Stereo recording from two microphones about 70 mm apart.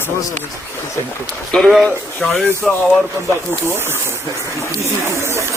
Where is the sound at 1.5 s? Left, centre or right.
Centre.